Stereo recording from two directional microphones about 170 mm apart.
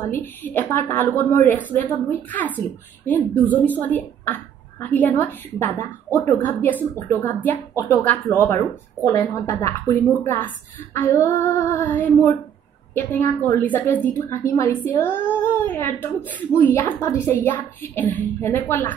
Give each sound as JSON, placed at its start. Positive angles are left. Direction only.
{"t": 0.1, "sound": "a woman's voice", "side_deg": 10}